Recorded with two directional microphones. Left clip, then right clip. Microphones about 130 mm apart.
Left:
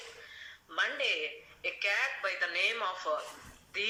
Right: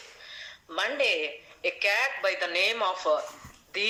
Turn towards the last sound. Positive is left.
turn(degrees=-30)  # may be behind; listen again after turning